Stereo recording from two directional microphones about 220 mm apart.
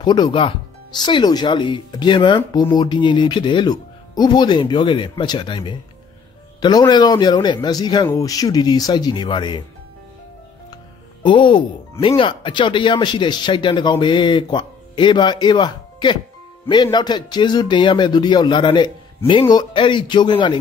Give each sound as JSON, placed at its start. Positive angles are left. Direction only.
{"t": 0.0, "sound": "speech", "side_deg": 20}
{"t": 11.2, "sound": "speech", "side_deg": 20}